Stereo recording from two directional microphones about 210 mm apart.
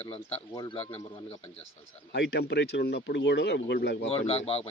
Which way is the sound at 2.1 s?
55° left (ahead or behind).